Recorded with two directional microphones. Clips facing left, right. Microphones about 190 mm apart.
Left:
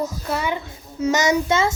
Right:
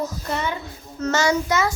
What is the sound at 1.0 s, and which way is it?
Speech, 15° left (ahead or behind).